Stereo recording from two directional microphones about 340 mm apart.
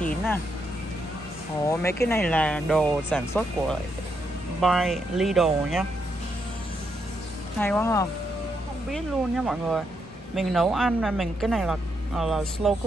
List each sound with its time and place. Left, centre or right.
1.7 s speech: centre
7.6 s speech: centre